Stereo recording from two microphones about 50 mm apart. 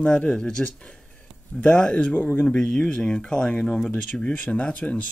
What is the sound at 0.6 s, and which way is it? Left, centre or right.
Speech, left.